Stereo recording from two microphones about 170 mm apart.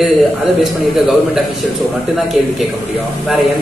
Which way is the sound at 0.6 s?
Centre (ahead or behind).